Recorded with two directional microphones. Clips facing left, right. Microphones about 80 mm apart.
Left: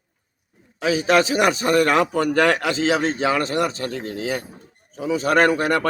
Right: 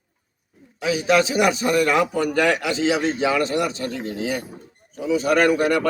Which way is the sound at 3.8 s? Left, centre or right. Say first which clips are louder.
Even; left.